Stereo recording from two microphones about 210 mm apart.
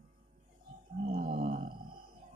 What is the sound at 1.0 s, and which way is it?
Groan, 35° right (ahead or behind).